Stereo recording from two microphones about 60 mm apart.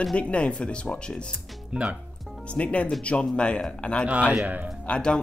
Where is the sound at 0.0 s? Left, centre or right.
Centre.